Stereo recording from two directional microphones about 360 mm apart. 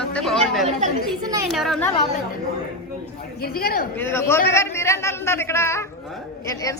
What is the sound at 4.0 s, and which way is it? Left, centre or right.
A man's voice, centre.